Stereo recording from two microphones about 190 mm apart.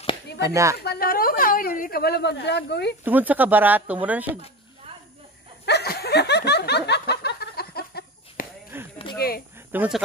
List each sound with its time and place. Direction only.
0.4 s speech: 15° right (ahead or behind)
0.8 s a woman's voice: 50° left (ahead or behind)
3.0 s speech: 10° right (ahead or behind)
5.7 s snicker: 55° left (ahead or behind)
8.7 s a sound: 10° right (ahead or behind)
9.2 s speech: 55° left (ahead or behind)
9.7 s speech: 5° right (ahead or behind)